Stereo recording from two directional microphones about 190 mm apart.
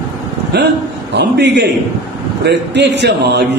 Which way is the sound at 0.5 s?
60° right (ahead or behind).